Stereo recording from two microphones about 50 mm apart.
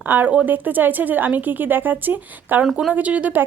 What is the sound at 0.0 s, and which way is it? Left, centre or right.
A woman's voice, right.